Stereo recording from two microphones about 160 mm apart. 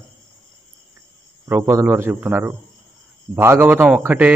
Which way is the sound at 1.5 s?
15° right (ahead or behind).